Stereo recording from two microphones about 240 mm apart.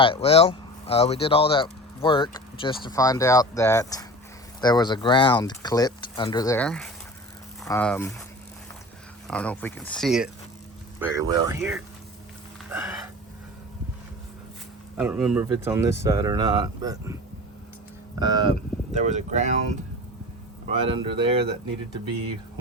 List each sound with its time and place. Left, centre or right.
0.0 s speech: left; by 8.1 s centre
9.2 s speech: centre
11.0 s speech: centre
12.7 s a sound: centre
14.9 s speech: centre
18.2 s speech: centre
18.9 s speech: right
20.7 s speech: right